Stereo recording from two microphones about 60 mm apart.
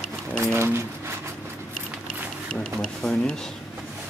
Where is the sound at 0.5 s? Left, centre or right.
Right.